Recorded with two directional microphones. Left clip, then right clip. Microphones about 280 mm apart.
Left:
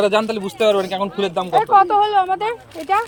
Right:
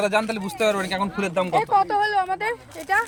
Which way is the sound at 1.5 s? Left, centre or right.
Right.